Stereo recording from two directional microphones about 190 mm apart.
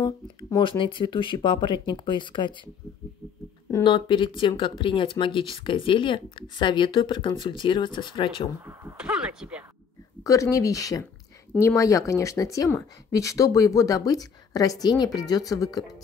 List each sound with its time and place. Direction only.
0.0 s speech: 20° left (ahead or behind)
3.7 s speech: 25° left (ahead or behind)
8.9 s speech: 5° right (ahead or behind)
10.2 s speech: 15° left (ahead or behind)